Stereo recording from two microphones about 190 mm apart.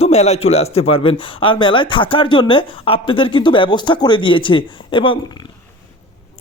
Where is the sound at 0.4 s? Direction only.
35° left (ahead or behind).